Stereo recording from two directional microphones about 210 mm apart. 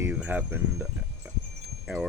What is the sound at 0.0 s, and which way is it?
Speech, 5° right (ahead or behind).